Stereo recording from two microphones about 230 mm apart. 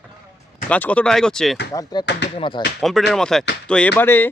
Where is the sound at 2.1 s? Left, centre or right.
Left.